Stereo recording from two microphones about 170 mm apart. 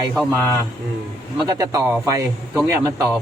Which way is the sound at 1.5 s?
20° right (ahead or behind).